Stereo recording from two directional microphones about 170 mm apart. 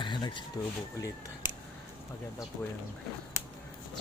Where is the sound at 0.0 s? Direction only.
25° left (ahead or behind).